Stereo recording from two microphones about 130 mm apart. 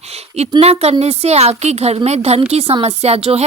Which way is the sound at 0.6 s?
55° right (ahead or behind).